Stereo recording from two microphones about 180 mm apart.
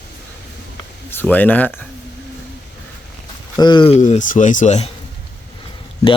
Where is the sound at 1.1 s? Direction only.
10° left (ahead or behind).